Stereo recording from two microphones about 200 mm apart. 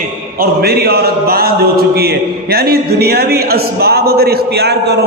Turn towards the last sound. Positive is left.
turn(degrees=-55)  # may be behind; listen again after turning